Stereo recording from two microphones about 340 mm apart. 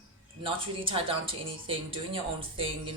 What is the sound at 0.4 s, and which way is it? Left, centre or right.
A woman's voice, centre.